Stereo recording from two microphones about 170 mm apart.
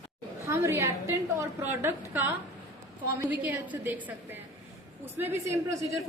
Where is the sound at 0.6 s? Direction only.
15° right (ahead or behind).